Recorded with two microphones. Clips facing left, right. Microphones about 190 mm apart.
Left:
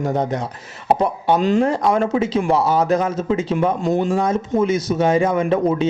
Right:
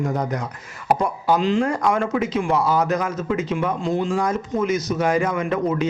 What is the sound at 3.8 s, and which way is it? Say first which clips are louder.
Speech: left 4 dB; 40° left (ahead or behind).